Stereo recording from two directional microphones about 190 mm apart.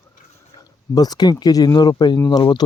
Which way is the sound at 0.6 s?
20° left (ahead or behind).